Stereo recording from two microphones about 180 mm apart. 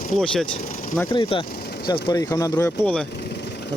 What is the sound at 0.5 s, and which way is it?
Vehicle, 45° left (ahead or behind).